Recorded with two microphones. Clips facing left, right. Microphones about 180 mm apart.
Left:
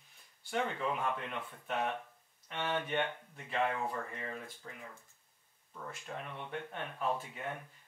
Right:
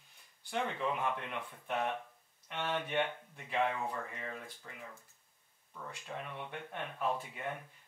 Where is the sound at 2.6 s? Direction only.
5° right (ahead or behind).